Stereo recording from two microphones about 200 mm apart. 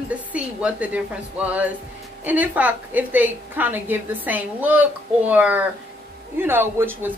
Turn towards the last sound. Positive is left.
turn(degrees=-10)  # may be behind; listen again after turning